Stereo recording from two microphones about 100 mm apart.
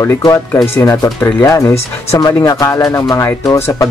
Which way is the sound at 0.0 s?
30° left (ahead or behind).